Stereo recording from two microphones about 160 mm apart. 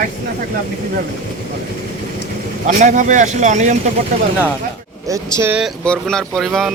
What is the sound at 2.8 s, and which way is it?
Speech, 50° right (ahead or behind).